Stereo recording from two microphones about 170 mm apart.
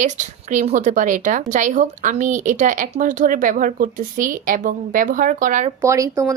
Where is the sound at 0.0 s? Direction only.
45° right (ahead or behind).